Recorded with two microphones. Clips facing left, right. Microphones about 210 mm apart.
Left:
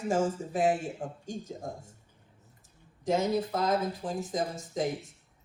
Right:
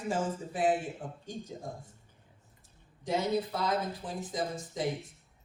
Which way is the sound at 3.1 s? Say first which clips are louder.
Left 3 dB; 45° left (ahead or behind).